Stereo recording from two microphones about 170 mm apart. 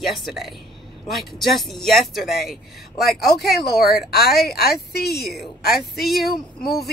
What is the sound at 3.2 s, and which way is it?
A woman's voice, 70° left (ahead or behind).